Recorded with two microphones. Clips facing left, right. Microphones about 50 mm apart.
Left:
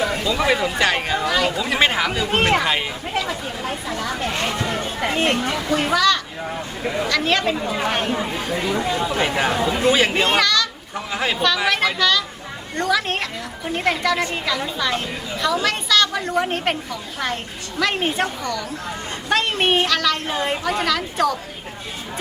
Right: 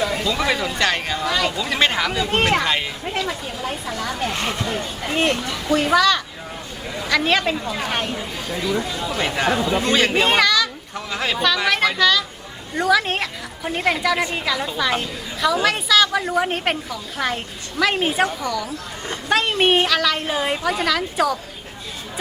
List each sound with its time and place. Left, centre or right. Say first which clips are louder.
0.0 s a woman's voice: left 1 dB; centre
4.8 s speech: even; left
5.9 s a woman's voice: right 1 dB; centre
6.8 s speech: left 7 dB; left
7.2 s a woman's voice: right 2 dB; centre
7.5 s speech: left 2 dB; centre
8.2 s speech: left 3 dB; left
9.0 s speech: left 1 dB; centre
10.2 s a child's voice: right 1 dB; centre
10.9 s a woman's voice: left 2 dB; centre